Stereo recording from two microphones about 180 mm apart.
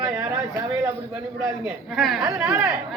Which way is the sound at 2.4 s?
15° right (ahead or behind).